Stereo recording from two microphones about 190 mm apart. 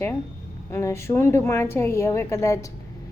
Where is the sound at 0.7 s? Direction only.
15° left (ahead or behind).